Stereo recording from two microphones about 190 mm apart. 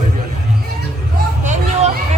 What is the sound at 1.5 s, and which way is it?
Hubbub, 35° right (ahead or behind).